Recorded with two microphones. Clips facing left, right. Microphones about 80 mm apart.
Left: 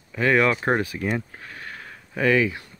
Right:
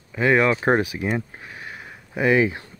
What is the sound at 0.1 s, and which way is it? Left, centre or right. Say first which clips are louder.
Speech: right 1 dB; centre.